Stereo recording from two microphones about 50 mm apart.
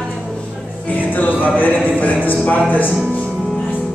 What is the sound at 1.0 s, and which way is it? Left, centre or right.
Music, left.